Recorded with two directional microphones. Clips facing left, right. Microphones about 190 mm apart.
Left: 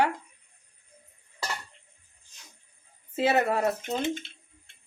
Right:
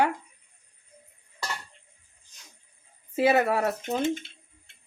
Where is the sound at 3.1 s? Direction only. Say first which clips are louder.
Right 2 dB; 10° right (ahead or behind).